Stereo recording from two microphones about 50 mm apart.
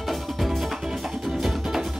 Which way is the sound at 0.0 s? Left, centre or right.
Centre.